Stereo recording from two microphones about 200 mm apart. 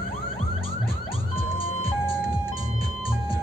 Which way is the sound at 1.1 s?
30° left (ahead or behind).